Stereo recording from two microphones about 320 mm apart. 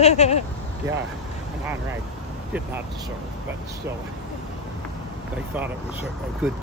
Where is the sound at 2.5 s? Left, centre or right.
Centre.